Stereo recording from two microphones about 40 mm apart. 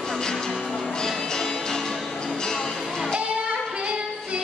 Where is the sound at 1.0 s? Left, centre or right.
Centre.